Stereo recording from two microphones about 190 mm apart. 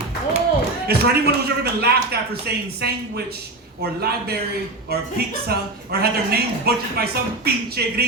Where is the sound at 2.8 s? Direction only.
55° right (ahead or behind).